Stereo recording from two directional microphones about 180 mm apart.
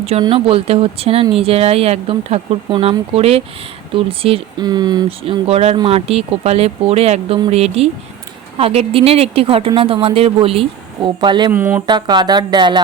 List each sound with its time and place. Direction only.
0.0 s speech: 30° right (ahead or behind)
11.5 s speech: 10° right (ahead or behind)
11.9 s speech: 25° right (ahead or behind)